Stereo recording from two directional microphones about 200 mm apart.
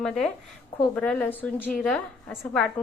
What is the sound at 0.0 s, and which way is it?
A woman's voice, 5° left (ahead or behind).